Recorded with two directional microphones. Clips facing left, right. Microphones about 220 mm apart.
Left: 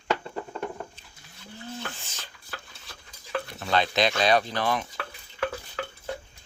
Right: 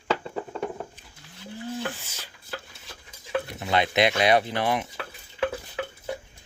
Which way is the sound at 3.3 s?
20° right (ahead or behind).